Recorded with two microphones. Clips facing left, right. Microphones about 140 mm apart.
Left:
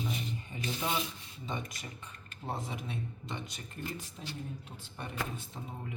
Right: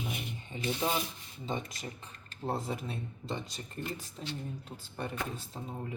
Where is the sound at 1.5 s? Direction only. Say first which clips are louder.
Right 3 dB; 30° right (ahead or behind).